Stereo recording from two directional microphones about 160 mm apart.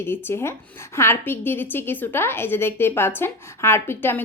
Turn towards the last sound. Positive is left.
turn(degrees=15)  # may be behind; listen again after turning